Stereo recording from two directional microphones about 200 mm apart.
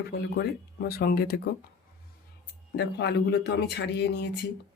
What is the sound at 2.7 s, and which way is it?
Speech, 55° left (ahead or behind).